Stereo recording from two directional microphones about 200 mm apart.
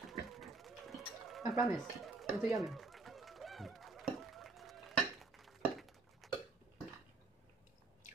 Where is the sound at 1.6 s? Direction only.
Centre (ahead or behind).